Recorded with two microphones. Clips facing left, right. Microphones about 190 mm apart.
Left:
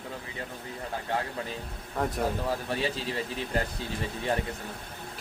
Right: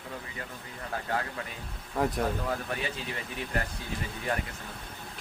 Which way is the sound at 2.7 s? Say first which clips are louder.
Left 4 dB; 30° left (ahead or behind).